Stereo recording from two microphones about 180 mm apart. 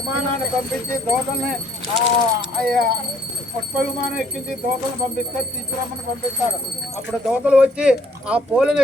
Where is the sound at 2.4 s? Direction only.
55° right (ahead or behind).